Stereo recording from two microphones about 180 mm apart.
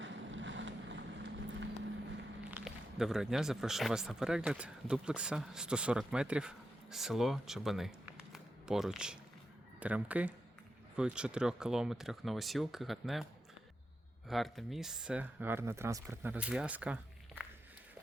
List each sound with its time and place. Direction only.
0.0 s boat: 90° right
2.5 s speech: 5° right (ahead or behind)
14.3 s speech: centre (ahead or behind)